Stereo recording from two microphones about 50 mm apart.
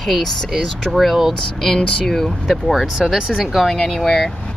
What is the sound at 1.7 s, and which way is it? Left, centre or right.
Speech, centre.